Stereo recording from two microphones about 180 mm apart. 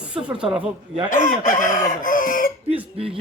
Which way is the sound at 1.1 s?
45° left (ahead or behind).